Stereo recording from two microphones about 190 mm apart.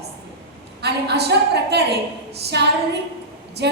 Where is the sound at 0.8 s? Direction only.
60° right (ahead or behind).